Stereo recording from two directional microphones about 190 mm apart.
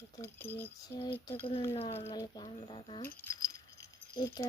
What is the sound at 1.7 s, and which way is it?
Speech, 35° left (ahead or behind).